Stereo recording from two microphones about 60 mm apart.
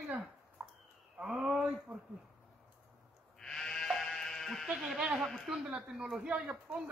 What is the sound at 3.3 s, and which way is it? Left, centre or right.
Sheep, centre.